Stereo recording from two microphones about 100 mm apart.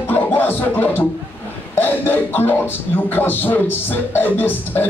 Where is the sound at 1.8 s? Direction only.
20° left (ahead or behind).